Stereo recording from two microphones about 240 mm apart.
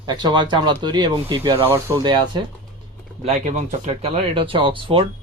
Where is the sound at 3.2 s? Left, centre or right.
Right.